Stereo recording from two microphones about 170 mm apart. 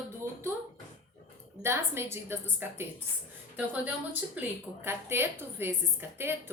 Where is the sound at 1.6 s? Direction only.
15° right (ahead or behind).